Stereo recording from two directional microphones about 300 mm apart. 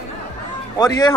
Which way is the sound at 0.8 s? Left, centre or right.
Centre.